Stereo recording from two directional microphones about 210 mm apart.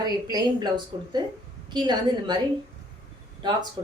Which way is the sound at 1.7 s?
20° right (ahead or behind).